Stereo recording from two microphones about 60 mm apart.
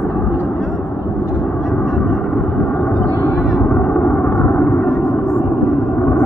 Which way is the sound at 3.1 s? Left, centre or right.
Left.